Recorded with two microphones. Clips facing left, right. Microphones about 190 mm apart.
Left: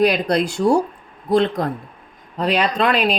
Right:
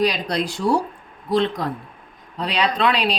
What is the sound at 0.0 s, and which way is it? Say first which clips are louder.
Speech: left 5 dB; 55° left (ahead or behind).